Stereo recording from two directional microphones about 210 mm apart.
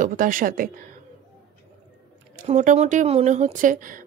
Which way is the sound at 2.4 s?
35° right (ahead or behind).